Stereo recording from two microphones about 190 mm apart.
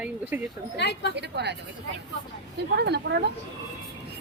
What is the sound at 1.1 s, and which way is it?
Speech, 60° right (ahead or behind).